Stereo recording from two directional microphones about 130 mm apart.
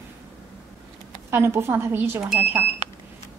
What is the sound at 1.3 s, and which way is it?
Speech, 20° right (ahead or behind).